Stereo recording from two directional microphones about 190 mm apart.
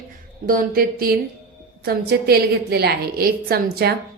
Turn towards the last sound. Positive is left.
turn(degrees=-55)  # may be behind; listen again after turning